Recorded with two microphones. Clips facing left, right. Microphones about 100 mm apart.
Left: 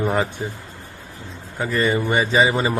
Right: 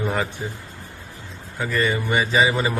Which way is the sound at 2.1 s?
20° left (ahead or behind).